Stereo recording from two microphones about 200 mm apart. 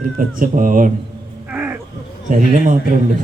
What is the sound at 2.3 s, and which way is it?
Speech, 40° right (ahead or behind).